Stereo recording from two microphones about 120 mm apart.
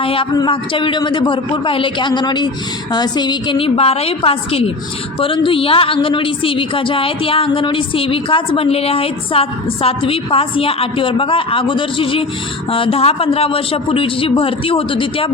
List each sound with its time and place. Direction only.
0.0 s a man's voice: 50° left (ahead or behind)
3.8 s a woman's voice: 55° left (ahead or behind)